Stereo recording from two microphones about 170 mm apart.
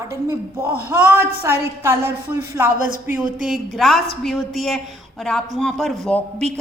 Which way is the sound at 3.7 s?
Centre (ahead or behind).